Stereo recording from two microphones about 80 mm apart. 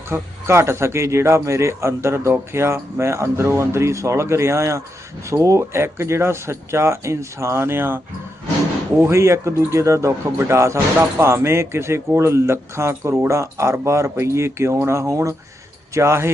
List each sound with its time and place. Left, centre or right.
0.1 s speech: right